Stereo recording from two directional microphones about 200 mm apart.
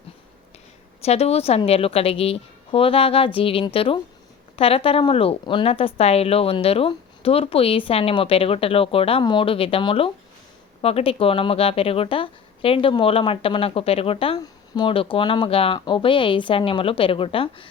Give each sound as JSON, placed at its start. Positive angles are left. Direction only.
{"t": 1.0, "sound": "speech", "side_deg": 30}